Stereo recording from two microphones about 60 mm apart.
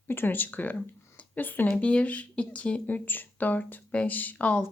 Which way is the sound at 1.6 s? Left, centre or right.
Centre.